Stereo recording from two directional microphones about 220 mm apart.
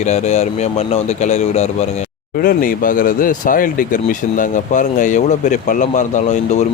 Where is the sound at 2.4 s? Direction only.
40° left (ahead or behind).